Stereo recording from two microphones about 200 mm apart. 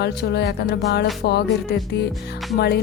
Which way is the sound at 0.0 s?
55° left (ahead or behind).